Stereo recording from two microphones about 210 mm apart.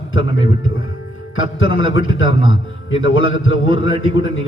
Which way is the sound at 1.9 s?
70° left (ahead or behind).